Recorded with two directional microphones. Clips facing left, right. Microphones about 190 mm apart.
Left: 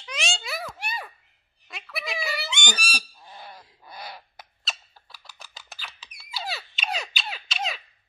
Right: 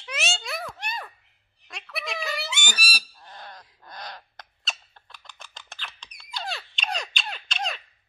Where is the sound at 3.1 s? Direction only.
5° left (ahead or behind).